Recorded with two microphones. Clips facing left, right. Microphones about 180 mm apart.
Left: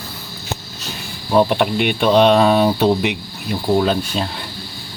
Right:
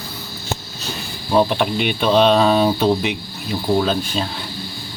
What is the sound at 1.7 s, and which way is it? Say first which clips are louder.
Speech: left 2 dB; 60° left (ahead or behind).